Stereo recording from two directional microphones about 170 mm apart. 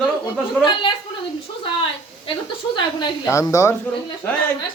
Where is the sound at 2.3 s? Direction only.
25° left (ahead or behind).